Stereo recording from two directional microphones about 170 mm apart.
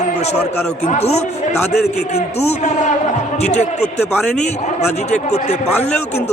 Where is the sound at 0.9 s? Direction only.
40° left (ahead or behind).